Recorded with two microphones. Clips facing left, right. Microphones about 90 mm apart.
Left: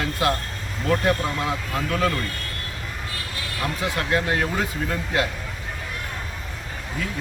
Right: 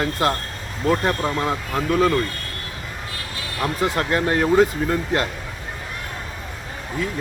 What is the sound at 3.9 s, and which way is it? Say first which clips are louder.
Speech: even; 40° right (ahead or behind).